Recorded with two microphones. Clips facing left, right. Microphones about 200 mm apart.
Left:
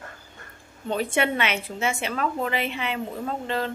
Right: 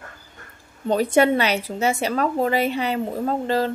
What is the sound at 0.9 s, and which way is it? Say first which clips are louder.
A woman's voice: right 7 dB; 40° right (ahead or behind).